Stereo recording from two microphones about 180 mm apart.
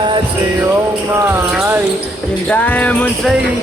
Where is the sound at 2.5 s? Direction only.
10° left (ahead or behind).